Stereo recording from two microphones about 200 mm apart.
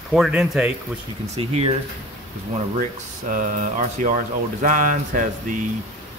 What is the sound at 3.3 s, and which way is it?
Speech, 40° right (ahead or behind).